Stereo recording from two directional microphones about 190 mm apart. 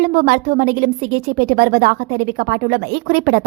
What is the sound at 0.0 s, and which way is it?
A woman's voice, 45° right (ahead or behind).